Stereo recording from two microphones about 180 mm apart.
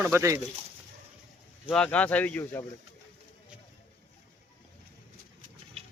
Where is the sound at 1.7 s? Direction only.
5° left (ahead or behind).